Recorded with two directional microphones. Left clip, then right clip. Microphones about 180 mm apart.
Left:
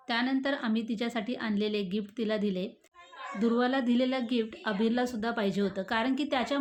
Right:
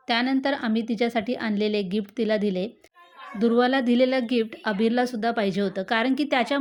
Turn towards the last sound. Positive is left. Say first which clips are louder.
# right 7 dB
turn(degrees=-35)  # may be behind; listen again after turning